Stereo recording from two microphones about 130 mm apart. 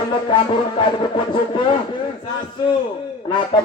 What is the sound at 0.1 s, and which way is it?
Speech, 40° left (ahead or behind).